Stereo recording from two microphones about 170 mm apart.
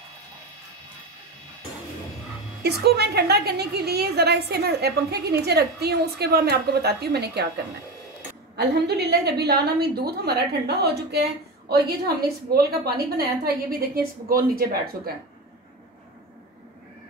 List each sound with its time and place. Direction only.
2.6 s a woman's voice: 70° right (ahead or behind)
8.5 s a woman's voice: 75° right (ahead or behind); by 15.1 s 60° right (ahead or behind)